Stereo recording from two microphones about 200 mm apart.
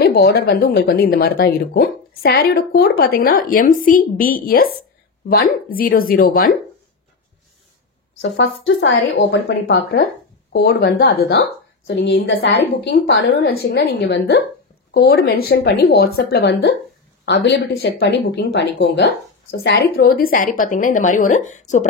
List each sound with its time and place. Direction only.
0.0 s speech: 50° left (ahead or behind)
8.2 s a woman's voice: 65° left (ahead or behind)
20.2 s a woman's voice: 45° left (ahead or behind)